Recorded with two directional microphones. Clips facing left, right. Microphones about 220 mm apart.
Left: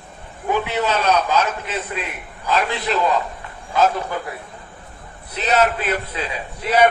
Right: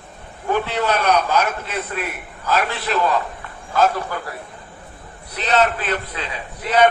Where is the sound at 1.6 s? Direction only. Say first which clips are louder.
Right 1 dB; 15° left (ahead or behind).